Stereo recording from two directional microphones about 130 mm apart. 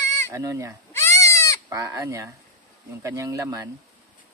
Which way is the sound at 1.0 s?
20° left (ahead or behind).